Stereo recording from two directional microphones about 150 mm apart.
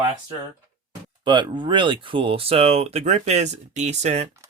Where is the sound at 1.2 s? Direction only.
30° right (ahead or behind).